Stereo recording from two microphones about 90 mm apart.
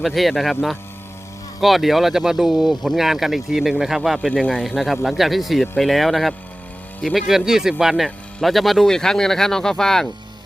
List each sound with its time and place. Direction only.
0.0 s speech: centre (ahead or behind)